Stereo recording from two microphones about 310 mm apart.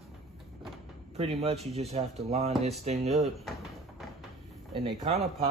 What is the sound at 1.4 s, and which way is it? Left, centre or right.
A man's voice, centre.